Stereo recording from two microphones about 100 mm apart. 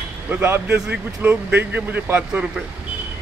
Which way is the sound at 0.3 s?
20° right (ahead or behind).